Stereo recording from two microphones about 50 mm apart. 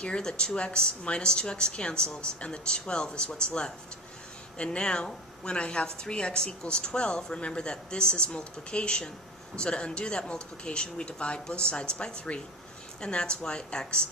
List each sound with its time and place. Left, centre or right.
0.0 s a woman's voice: centre